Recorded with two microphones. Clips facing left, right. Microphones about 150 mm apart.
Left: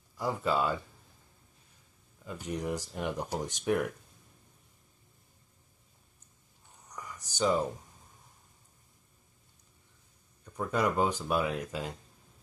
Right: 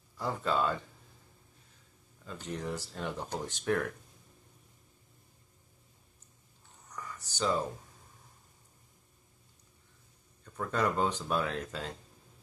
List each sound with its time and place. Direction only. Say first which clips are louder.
0.2 s speech: left 1 dB; 10° left (ahead or behind)
2.2 s speech: left 3 dB; 15° left (ahead or behind)
7.0 s a sound: left 3 dB; 15° left (ahead or behind)
10.4 s speech: left 2 dB; 10° left (ahead or behind)